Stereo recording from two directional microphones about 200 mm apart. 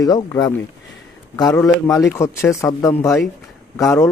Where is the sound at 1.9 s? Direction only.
15° left (ahead or behind).